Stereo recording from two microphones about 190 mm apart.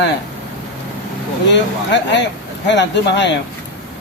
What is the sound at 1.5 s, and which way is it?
Speech, 70° left (ahead or behind).